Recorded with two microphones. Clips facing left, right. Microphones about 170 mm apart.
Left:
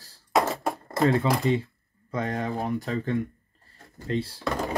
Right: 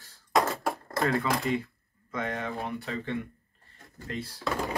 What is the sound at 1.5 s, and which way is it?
Speech, 30° left (ahead or behind).